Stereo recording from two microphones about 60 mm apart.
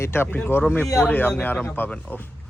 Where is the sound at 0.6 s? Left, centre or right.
Left.